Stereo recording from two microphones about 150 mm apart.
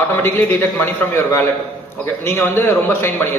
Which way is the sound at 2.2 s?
15° left (ahead or behind).